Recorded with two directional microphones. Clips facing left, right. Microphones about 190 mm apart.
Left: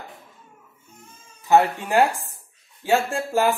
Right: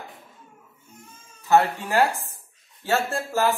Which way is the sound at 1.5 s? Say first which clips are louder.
Left 2 dB; 15° left (ahead or behind).